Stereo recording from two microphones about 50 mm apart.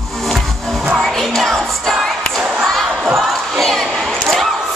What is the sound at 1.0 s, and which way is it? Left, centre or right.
Music, centre.